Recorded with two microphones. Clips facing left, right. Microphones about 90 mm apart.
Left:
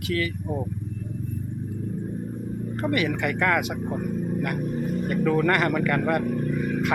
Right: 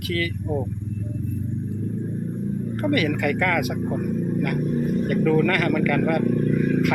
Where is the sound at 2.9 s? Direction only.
20° left (ahead or behind).